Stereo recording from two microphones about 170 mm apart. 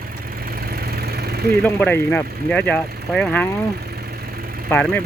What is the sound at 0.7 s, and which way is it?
Vehicle, 65° right (ahead or behind).